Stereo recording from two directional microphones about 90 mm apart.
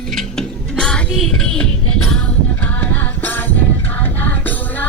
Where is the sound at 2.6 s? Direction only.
20° left (ahead or behind).